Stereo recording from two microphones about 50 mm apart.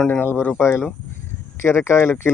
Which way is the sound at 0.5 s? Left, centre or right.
Left.